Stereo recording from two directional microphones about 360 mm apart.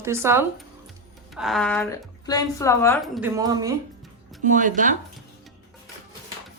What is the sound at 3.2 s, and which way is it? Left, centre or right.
Speech, centre.